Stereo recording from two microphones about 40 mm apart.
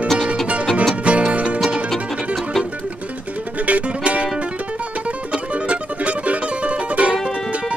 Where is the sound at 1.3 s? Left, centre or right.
Right.